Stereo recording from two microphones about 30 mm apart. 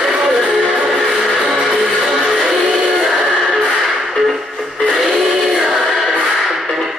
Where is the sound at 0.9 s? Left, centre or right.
Centre.